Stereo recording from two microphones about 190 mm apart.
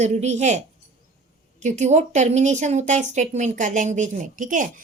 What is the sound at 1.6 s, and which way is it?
A woman's voice, 35° right (ahead or behind).